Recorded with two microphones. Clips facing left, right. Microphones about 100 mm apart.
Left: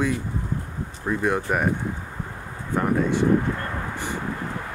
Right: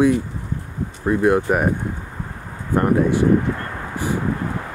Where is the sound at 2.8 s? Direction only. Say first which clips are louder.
Right 5 dB; 5° right (ahead or behind).